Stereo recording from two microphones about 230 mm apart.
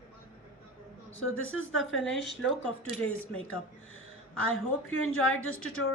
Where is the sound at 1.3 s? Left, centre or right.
Left.